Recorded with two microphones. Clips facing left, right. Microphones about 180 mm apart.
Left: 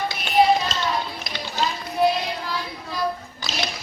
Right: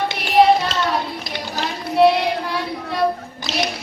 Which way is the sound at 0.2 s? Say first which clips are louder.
Right 4 dB; 65° right (ahead or behind).